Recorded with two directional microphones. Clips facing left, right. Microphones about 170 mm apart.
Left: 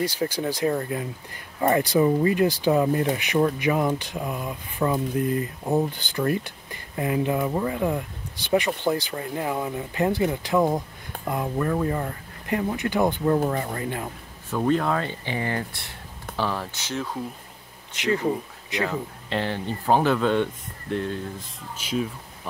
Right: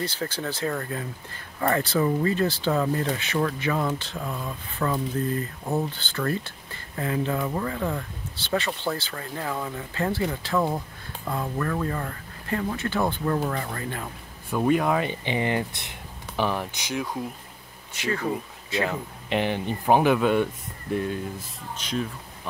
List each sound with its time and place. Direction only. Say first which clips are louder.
0.0 s speech: left 4 dB; 10° left (ahead or behind)
14.6 s speech: right 1 dB; 10° right (ahead or behind)
18.0 s speech: left 4 dB; 20° left (ahead or behind)
18.9 s speech: even; 15° right (ahead or behind)
21.7 s speech: left 2 dB; 10° left (ahead or behind)